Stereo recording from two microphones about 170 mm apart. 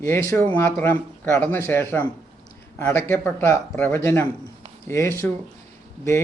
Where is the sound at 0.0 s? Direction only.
15° left (ahead or behind).